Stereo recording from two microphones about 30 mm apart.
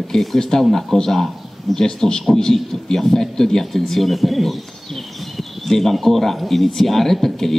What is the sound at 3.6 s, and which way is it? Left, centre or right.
Speech, centre.